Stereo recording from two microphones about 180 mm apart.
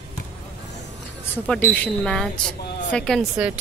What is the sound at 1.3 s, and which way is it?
Speech, 5° left (ahead or behind).